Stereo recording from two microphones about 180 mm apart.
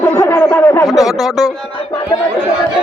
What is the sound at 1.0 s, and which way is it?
Speech, centre (ahead or behind).